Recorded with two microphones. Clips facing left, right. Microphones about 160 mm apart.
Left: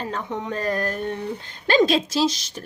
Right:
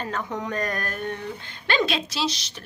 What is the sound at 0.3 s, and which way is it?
Speech, 25° left (ahead or behind).